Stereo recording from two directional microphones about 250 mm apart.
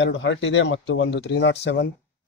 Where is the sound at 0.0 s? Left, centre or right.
Left.